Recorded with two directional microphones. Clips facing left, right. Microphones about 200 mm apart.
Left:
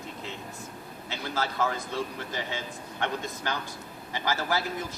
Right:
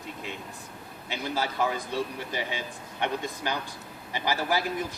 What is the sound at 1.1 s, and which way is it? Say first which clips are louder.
Speech: right 2 dB; 15° right (ahead or behind).